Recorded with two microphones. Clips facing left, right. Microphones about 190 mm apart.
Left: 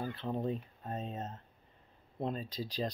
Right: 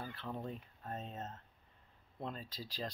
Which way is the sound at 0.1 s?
20° left (ahead or behind).